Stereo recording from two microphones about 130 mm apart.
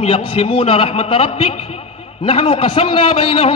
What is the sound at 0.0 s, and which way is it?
A man's voice, 45° left (ahead or behind).